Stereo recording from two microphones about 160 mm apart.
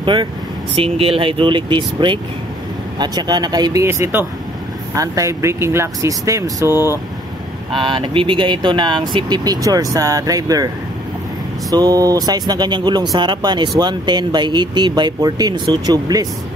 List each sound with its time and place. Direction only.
0.0 s speech: 30° right (ahead or behind); by 7.0 s 15° right (ahead or behind)
7.7 s speech: 30° right (ahead or behind)
11.7 s speech: 25° right (ahead or behind)